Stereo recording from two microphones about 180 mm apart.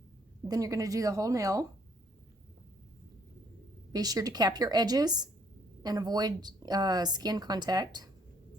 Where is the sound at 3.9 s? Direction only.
20° right (ahead or behind).